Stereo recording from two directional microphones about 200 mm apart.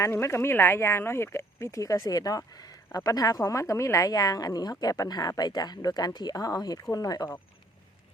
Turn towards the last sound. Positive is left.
turn(degrees=20)  # may be behind; listen again after turning